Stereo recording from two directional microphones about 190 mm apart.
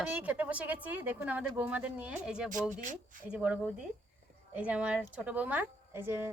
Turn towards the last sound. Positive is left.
turn(degrees=-10)  # may be behind; listen again after turning